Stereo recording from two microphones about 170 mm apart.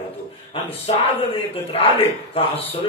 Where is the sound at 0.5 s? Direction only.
35° left (ahead or behind).